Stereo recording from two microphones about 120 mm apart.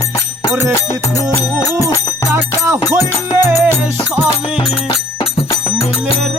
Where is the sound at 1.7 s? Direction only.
25° right (ahead or behind).